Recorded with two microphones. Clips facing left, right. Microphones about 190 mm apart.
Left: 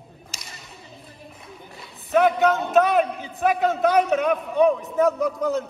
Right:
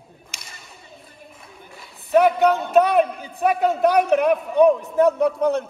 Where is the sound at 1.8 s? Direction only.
Centre (ahead or behind).